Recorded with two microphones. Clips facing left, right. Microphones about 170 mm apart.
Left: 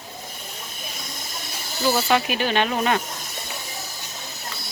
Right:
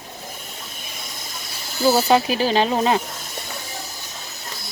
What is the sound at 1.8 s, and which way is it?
Speech, 35° right (ahead or behind).